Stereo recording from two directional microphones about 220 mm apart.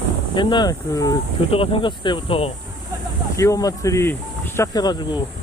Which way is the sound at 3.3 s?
15° left (ahead or behind).